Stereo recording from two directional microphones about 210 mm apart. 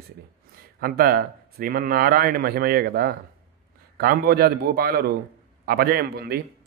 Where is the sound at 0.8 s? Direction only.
45° right (ahead or behind).